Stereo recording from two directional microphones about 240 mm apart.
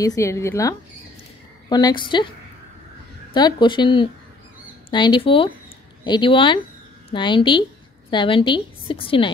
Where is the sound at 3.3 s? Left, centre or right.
Centre.